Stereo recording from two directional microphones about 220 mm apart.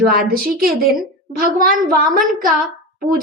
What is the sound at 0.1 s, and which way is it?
A woman's voice, 40° right (ahead or behind).